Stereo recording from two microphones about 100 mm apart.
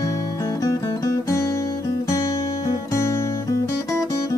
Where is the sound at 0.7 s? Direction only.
35° left (ahead or behind).